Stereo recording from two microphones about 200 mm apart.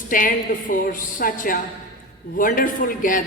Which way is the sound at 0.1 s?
45° left (ahead or behind).